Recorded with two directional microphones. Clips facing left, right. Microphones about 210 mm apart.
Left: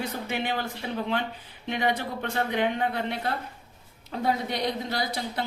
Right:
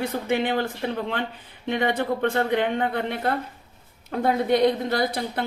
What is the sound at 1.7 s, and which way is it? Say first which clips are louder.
A woman's voice: right 4 dB; 55° right (ahead or behind).